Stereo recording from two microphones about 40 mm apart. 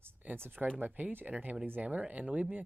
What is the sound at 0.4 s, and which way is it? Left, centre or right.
Speech, right.